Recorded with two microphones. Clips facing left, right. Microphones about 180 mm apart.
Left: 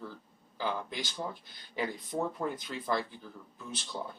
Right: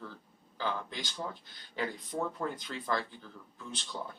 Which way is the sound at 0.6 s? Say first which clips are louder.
Left 1 dB; 15° left (ahead or behind).